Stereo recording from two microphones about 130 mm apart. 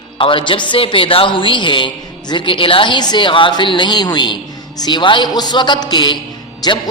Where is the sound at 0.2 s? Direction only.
40° left (ahead or behind).